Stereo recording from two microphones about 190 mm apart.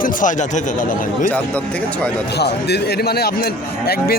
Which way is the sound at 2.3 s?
60° left (ahead or behind).